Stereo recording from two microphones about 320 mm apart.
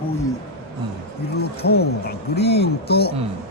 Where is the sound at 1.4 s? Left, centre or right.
Left.